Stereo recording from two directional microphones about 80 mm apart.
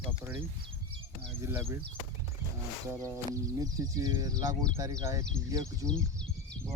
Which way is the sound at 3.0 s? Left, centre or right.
Right.